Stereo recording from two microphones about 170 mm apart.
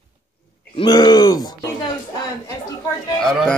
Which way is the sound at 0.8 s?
25° left (ahead or behind).